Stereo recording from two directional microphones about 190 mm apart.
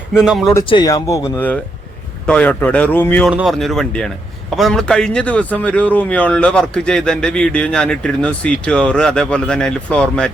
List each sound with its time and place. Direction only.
0.3 s speech: centre (ahead or behind)
0.7 s speech: 20° left (ahead or behind)
2.2 s speech: 5° left (ahead or behind)